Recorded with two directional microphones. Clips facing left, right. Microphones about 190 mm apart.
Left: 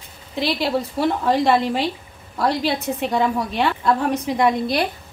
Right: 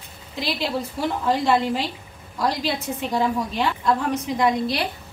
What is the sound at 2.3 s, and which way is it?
A woman's voice, 65° left (ahead or behind).